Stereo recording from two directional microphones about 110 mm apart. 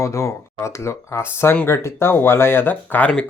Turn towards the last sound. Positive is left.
turn(degrees=15)  # may be behind; listen again after turning